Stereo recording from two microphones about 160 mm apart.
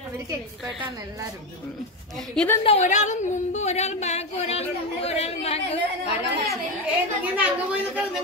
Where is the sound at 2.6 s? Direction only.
35° left (ahead or behind).